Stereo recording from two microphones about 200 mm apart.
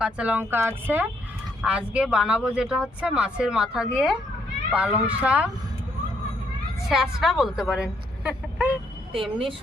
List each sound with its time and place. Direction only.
0.0 s speech: 5° right (ahead or behind)
6.8 s speech: centre (ahead or behind)
9.1 s speech: 25° right (ahead or behind)